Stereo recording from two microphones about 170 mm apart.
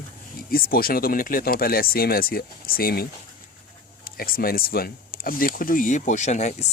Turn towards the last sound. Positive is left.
turn(degrees=45)  # may be behind; listen again after turning